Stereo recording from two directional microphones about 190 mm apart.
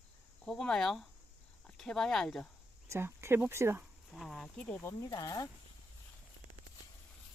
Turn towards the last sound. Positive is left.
turn(degrees=20)  # may be behind; listen again after turning